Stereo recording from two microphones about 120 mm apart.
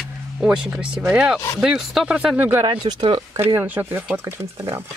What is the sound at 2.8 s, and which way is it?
Speech, 40° right (ahead or behind).